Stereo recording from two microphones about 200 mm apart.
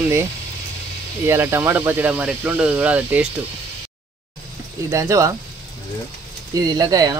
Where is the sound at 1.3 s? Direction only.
10° right (ahead or behind).